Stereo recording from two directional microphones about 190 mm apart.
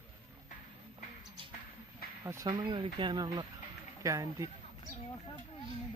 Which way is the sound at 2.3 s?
20° right (ahead or behind).